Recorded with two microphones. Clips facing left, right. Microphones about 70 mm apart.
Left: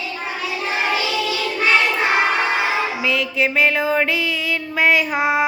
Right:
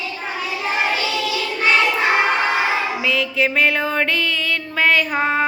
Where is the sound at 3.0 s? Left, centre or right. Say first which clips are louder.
Right 1 dB; centre.